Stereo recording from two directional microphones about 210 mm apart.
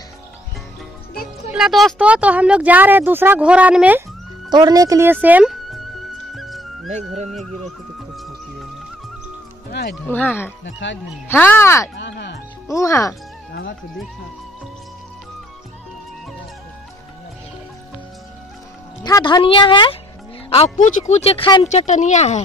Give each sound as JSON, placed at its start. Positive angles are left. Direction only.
{"t": 1.5, "sound": "speech", "side_deg": 0}
{"t": 4.5, "sound": "speech", "side_deg": -20}
{"t": 6.3, "sound": "music", "side_deg": 0}
{"t": 7.2, "sound": "speech", "side_deg": 0}
{"t": 9.7, "sound": "music", "side_deg": 50}
{"t": 10.0, "sound": "speech", "side_deg": 10}
{"t": 10.6, "sound": "speech", "side_deg": 60}
{"t": 11.2, "sound": "speech", "side_deg": 10}
{"t": 12.0, "sound": "music", "side_deg": 55}
{"t": 12.6, "sound": "speech", "side_deg": 15}
{"t": 13.5, "sound": "music", "side_deg": 60}
{"t": 19.0, "sound": "speech", "side_deg": 20}
{"t": 21.6, "sound": "speech", "side_deg": 35}